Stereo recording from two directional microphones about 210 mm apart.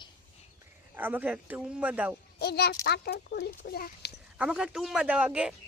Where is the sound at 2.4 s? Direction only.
50° left (ahead or behind).